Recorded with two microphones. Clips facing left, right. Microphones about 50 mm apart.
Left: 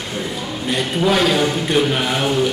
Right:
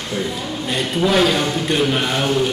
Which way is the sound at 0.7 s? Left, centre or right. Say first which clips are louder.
Left 1 dB; centre.